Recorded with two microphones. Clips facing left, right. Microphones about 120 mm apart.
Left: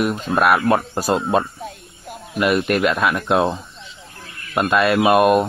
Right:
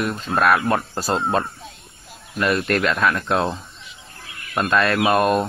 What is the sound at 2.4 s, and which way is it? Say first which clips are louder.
Speech: left 3 dB; 15° left (ahead or behind).